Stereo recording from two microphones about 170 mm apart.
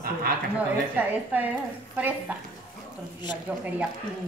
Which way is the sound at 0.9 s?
10° right (ahead or behind).